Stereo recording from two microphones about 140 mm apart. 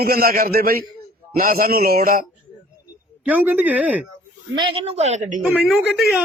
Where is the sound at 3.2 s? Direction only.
10° right (ahead or behind).